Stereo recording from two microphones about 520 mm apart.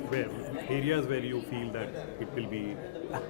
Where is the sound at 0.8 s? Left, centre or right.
Right.